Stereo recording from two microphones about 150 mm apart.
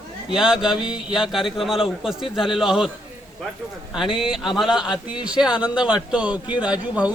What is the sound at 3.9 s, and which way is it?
A man's voice, 5° right (ahead or behind).